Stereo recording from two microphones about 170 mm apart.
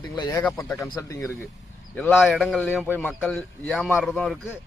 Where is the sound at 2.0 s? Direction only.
Centre (ahead or behind).